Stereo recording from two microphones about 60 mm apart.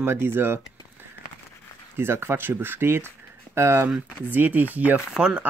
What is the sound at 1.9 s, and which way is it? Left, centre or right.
Speech, right.